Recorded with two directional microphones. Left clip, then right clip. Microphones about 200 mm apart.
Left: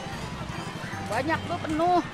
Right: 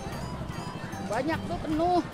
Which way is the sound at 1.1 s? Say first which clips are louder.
Left 2 dB; 15° right (ahead or behind).